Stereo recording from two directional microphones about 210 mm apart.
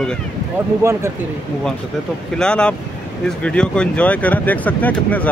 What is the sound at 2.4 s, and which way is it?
Speech, 5° left (ahead or behind).